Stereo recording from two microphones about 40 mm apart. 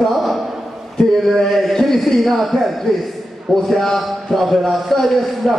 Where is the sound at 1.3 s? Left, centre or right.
Centre.